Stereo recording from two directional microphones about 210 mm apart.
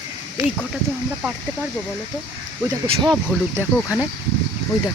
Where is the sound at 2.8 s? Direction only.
25° right (ahead or behind).